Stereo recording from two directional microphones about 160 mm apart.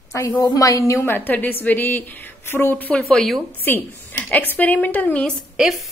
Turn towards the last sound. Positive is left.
turn(degrees=0)  # may be behind; listen again after turning